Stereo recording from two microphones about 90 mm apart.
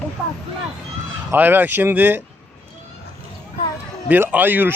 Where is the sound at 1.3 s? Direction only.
20° right (ahead or behind).